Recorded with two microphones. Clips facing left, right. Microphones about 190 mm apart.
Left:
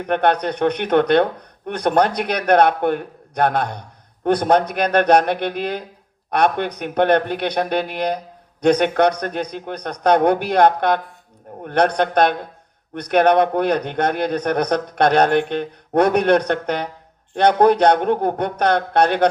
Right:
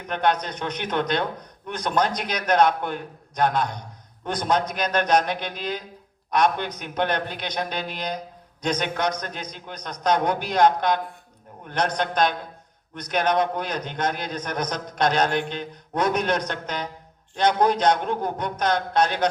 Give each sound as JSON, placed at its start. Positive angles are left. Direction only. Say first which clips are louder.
{"t": 0.0, "sound": "speech", "louder": "left 6 dB", "side_deg": 60}